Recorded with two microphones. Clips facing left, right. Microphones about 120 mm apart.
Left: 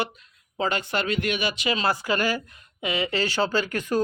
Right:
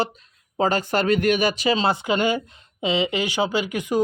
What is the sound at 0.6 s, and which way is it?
Speech, 40° right (ahead or behind).